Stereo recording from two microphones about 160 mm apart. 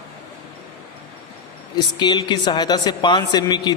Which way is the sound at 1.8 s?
25° left (ahead or behind).